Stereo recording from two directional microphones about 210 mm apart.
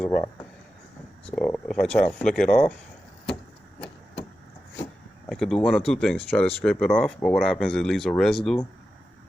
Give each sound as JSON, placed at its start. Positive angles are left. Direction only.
{"t": 0.0, "sound": "speech", "side_deg": 5}
{"t": 1.4, "sound": "speech", "side_deg": 5}
{"t": 5.3, "sound": "speech", "side_deg": 0}